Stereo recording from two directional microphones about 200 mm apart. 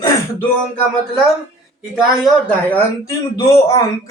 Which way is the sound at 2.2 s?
10° left (ahead or behind).